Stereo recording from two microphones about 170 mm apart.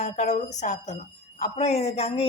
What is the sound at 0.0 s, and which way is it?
A woman's voice, 40° left (ahead or behind).